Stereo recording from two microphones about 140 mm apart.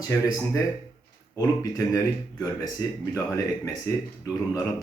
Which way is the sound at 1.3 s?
25° left (ahead or behind).